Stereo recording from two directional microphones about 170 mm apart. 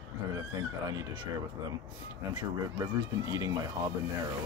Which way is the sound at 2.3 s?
25° right (ahead or behind).